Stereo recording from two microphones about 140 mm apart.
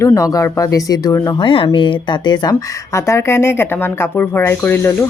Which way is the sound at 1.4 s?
40° left (ahead or behind).